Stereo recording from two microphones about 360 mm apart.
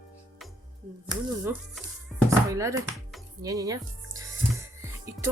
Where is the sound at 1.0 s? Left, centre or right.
Centre.